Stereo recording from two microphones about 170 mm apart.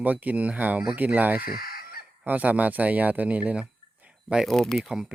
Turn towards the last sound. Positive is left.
turn(degrees=-5)  # may be behind; listen again after turning